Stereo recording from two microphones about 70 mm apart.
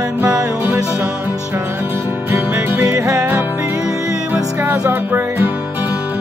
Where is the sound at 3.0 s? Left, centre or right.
Right.